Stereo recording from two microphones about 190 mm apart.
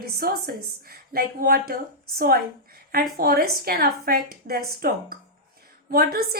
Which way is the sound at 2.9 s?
50° right (ahead or behind).